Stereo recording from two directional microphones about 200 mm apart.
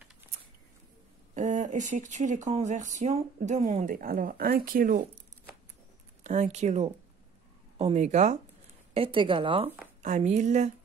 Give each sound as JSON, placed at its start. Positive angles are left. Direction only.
{"t": 1.3, "sound": "speech", "side_deg": -40}
{"t": 6.2, "sound": "a woman's voice", "side_deg": -35}